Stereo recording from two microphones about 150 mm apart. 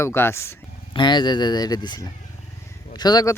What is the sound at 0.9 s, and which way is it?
Speech, 30° left (ahead or behind).